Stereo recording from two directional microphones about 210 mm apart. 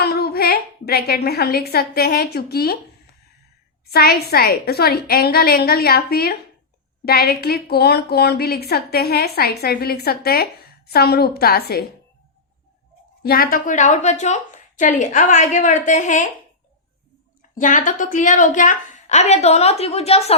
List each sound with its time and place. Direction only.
0.0 s a woman's voice: 50° left (ahead or behind)
3.8 s a woman's voice: 45° left (ahead or behind)
13.2 s a woman's voice: 45° left (ahead or behind)
17.5 s a woman's voice: 40° left (ahead or behind)